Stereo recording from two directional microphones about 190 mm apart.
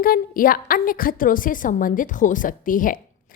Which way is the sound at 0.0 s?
50° left (ahead or behind).